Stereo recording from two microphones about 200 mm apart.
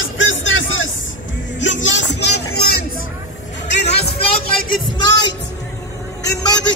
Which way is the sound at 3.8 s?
30° left (ahead or behind).